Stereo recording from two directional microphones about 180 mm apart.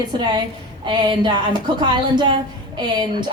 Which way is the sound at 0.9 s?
25° right (ahead or behind).